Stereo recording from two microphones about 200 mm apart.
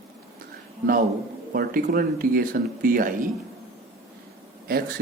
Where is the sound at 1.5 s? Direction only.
45° right (ahead or behind).